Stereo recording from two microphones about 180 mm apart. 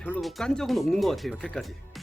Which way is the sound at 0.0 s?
5° left (ahead or behind).